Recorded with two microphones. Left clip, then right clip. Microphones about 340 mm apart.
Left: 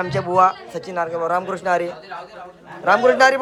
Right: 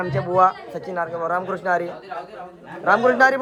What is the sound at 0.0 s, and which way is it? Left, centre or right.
A man's voice, centre.